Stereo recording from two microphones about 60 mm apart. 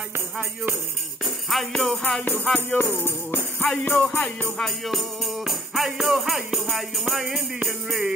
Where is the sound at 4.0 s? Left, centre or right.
Left.